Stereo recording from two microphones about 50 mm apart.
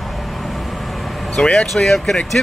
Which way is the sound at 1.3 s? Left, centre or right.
Centre.